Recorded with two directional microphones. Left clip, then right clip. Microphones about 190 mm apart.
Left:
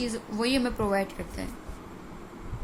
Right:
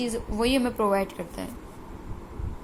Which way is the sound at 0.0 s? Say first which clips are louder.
Right 3 dB; 15° right (ahead or behind).